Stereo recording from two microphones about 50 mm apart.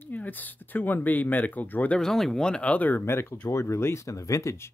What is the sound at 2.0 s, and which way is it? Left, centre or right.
Speech, centre.